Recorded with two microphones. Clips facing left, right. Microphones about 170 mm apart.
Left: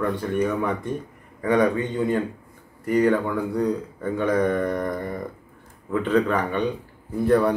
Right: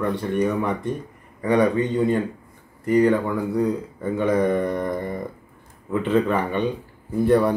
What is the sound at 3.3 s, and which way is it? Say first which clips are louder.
Mantra: right 1 dB; 10° right (ahead or behind).